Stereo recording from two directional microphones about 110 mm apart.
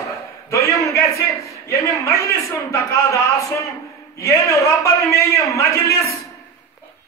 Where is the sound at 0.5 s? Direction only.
30° left (ahead or behind).